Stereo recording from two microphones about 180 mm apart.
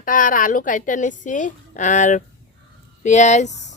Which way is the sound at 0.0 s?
45° left (ahead or behind).